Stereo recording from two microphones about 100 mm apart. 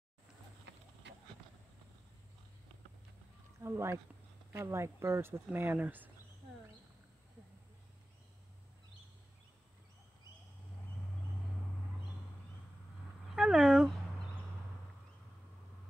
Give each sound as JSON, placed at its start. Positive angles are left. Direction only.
{"t": 3.6, "sound": "speech", "side_deg": -25}
{"t": 13.3, "sound": "dog", "side_deg": -5}